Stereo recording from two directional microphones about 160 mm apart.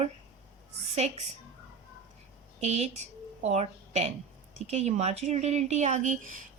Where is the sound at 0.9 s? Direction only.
40° right (ahead or behind).